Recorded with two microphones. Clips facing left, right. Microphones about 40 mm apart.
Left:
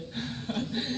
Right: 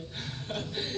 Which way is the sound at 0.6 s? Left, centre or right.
Left.